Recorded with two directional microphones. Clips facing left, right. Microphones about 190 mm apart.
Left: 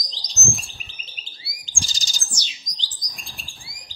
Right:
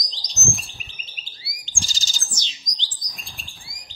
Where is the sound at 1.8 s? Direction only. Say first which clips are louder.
Even; 15° left (ahead or behind).